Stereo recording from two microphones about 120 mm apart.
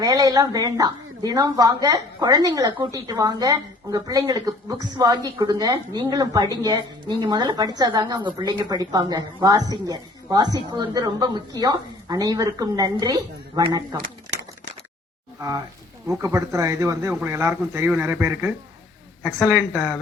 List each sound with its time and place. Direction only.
0.0 s a woman's voice: 30° right (ahead or behind)
15.4 s a woman's voice: 30° right (ahead or behind)
19.5 s speech: 5° left (ahead or behind)